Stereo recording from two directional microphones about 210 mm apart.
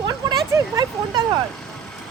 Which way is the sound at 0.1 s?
20° right (ahead or behind).